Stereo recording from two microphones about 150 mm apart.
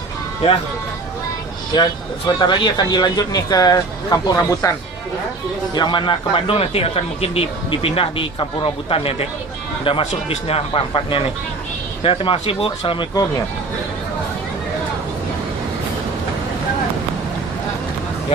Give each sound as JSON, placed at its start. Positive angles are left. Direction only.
{"t": 1.7, "sound": "speech", "side_deg": 30}
{"t": 5.7, "sound": "speech", "side_deg": 30}